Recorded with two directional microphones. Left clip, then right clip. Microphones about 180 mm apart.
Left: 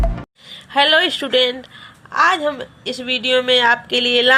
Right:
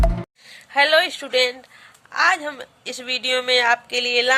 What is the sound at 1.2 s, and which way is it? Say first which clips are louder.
A woman's voice: left 4 dB; centre (ahead or behind).